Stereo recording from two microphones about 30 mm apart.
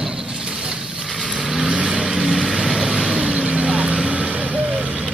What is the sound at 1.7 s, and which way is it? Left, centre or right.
Vehicle, right.